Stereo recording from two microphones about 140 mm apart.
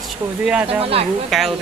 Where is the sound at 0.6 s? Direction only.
45° right (ahead or behind).